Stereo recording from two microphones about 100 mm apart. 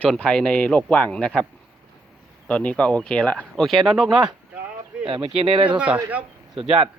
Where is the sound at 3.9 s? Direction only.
5° right (ahead or behind).